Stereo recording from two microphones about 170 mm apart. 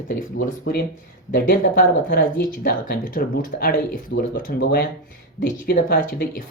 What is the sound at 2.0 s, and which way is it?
Speech, 60° left (ahead or behind).